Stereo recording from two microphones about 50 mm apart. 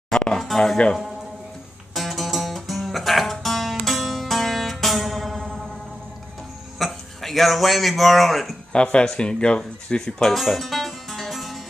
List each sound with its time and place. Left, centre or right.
0.1 s a sound: centre
2.0 s music: centre
6.8 s speech: centre
8.7 s speech: left
10.3 s music: centre